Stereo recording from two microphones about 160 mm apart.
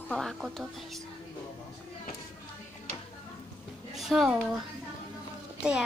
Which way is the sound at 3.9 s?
Centre (ahead or behind).